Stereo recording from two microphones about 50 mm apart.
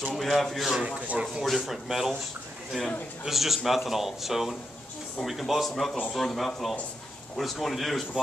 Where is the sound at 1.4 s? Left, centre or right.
Centre.